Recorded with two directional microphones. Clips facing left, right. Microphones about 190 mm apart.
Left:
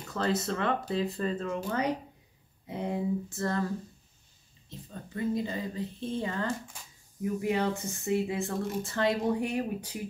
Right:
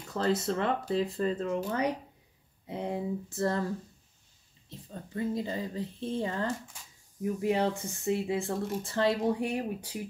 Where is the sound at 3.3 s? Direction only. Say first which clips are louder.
Right 2 dB; 30° right (ahead or behind).